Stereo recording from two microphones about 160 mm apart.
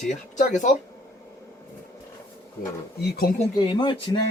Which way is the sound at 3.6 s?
30° left (ahead or behind).